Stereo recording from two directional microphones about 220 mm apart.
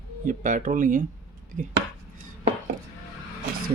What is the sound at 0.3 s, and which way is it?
Speech, 35° right (ahead or behind).